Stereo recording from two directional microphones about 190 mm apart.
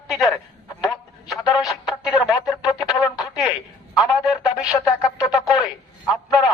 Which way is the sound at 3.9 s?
Centre (ahead or behind).